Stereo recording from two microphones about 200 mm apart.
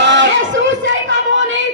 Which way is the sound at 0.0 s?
65° right (ahead or behind).